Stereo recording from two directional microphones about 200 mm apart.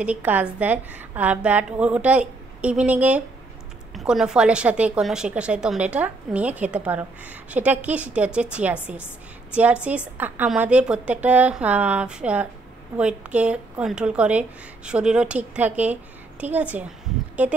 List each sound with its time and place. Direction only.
0.0 s a woman's voice: 10° right (ahead or behind)